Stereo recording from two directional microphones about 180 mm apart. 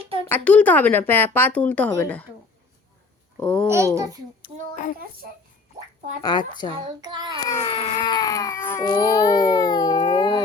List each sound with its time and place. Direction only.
0.3 s speech: 10° left (ahead or behind)
3.4 s speech: 5° left (ahead or behind)
3.7 s a child's voice: 15° right (ahead or behind)
6.2 s speech: 25° left (ahead or behind)
6.8 s child singing: 25° right (ahead or behind)
7.4 s baby cry: 20° left (ahead or behind)